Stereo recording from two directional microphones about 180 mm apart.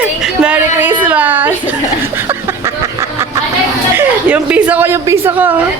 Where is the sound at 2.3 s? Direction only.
15° right (ahead or behind).